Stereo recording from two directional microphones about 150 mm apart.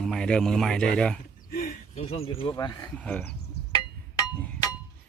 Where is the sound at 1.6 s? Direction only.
50° left (ahead or behind).